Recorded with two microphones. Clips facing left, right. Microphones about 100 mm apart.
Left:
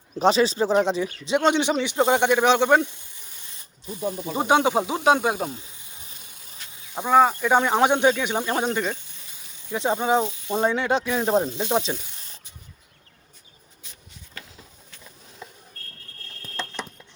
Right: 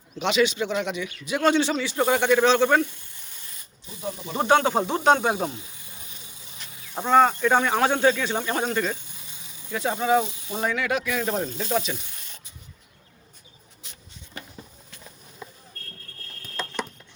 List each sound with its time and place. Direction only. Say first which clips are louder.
0.2 s speech: left 3 dB; 35° left (ahead or behind); by 2.9 s 20° left (ahead or behind)
4.4 s speech: even; 15° left (ahead or behind)
6.9 s speech: left 1 dB; 5° left (ahead or behind)
9.7 s speech: left 1 dB; 20° left (ahead or behind)